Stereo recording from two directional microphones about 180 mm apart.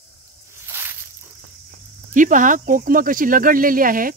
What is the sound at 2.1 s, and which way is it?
Speech, 45° right (ahead or behind).